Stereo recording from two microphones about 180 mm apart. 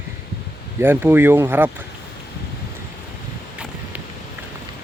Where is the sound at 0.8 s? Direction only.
10° right (ahead or behind).